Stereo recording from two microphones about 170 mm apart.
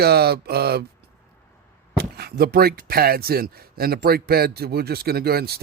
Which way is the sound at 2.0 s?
65° right (ahead or behind).